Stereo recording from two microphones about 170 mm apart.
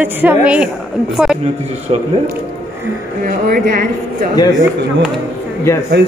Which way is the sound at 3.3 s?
55° right (ahead or behind).